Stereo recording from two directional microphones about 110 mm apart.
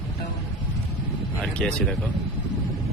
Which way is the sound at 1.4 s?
10° left (ahead or behind).